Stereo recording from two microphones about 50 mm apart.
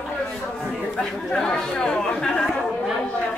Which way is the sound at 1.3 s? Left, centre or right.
Centre.